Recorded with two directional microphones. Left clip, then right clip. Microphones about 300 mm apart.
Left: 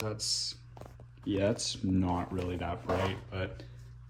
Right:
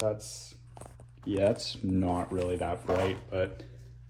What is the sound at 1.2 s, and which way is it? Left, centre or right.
Speech, centre.